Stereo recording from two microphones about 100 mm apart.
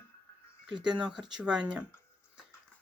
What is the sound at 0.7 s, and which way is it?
Speech, 50° right (ahead or behind).